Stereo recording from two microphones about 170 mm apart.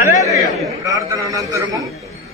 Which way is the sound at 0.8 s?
20° right (ahead or behind).